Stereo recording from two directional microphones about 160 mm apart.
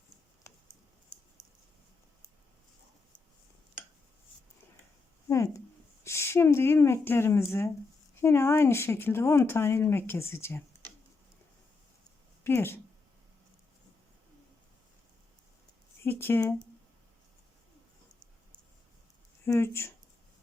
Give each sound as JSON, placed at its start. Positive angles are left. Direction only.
{"t": 5.3, "sound": "a woman's voice", "side_deg": 20}
{"t": 12.4, "sound": "speech", "side_deg": 15}
{"t": 16.0, "sound": "speech", "side_deg": 15}
{"t": 19.5, "sound": "speech", "side_deg": 15}